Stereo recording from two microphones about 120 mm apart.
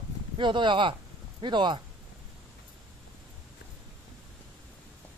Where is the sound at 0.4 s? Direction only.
40° right (ahead or behind).